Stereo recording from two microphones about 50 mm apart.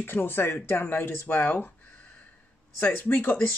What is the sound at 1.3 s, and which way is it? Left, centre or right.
Speech, left.